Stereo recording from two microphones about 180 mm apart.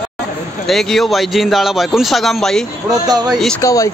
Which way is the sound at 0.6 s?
Centre (ahead or behind).